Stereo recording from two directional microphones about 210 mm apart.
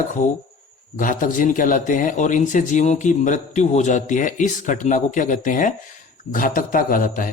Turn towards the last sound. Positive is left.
turn(degrees=40)  # may be behind; listen again after turning